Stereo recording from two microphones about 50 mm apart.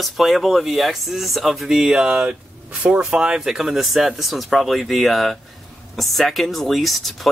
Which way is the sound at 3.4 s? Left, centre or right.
Centre.